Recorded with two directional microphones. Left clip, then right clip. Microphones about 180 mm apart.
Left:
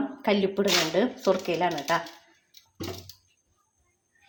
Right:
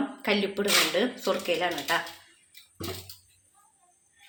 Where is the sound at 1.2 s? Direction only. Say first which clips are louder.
Left 2 dB; 35° left (ahead or behind).